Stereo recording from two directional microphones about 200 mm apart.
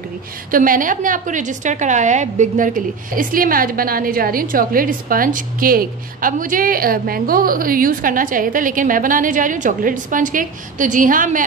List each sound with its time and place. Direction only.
0.5 s a woman's voice: 45° right (ahead or behind)